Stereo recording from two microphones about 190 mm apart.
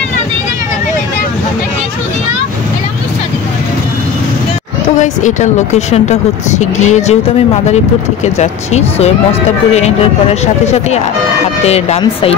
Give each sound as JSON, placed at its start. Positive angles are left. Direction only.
{"t": 4.9, "sound": "speech", "side_deg": 40}
{"t": 8.4, "sound": "speech", "side_deg": 35}